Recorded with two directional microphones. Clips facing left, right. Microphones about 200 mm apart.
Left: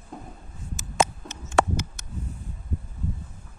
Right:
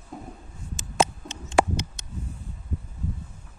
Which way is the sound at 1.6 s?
15° right (ahead or behind).